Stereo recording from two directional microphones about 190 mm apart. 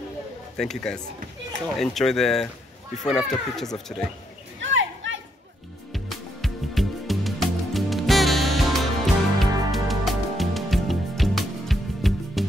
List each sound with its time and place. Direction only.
0.6 s speech: centre (ahead or behind)
4.6 s a sound: 85° right
5.9 s music: centre (ahead or behind)